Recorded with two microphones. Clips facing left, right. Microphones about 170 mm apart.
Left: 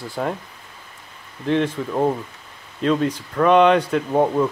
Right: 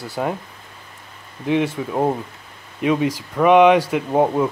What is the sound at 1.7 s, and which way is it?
Speech, 15° right (ahead or behind).